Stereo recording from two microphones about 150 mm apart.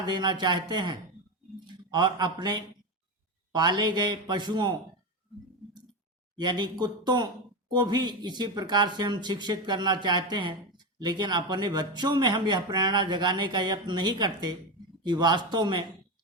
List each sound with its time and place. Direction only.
0.0 s a man's voice: 30° right (ahead or behind)
6.3 s speech: 30° right (ahead or behind)